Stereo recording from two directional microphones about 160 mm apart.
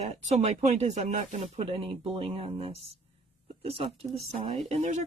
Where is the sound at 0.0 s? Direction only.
45° right (ahead or behind).